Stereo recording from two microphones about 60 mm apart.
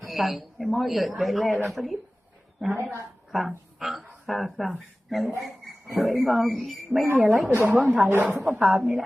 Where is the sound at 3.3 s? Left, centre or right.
Centre.